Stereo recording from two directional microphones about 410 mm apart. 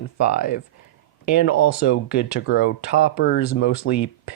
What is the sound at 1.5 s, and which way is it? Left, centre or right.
Speech, left.